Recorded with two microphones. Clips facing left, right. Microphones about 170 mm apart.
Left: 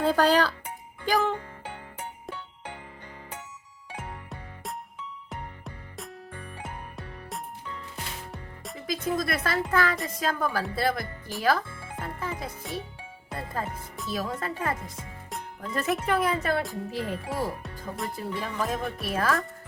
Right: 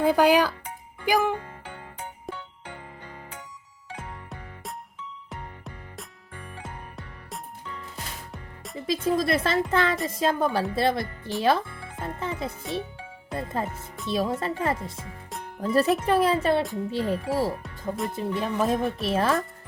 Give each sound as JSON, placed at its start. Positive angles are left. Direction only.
{"t": 0.0, "sound": "speech", "side_deg": -10}
{"t": 6.9, "sound": "music", "side_deg": 0}
{"t": 8.9, "sound": "speech", "side_deg": -30}
{"t": 11.4, "sound": "music", "side_deg": -25}
{"t": 13.3, "sound": "speech", "side_deg": -25}
{"t": 17.6, "sound": "speech", "side_deg": 0}
{"t": 18.1, "sound": "speech", "side_deg": -25}